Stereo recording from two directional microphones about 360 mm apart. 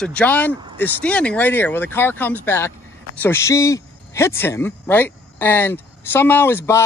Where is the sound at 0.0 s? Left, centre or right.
Centre.